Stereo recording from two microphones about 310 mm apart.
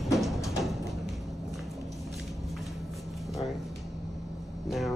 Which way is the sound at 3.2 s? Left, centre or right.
Centre.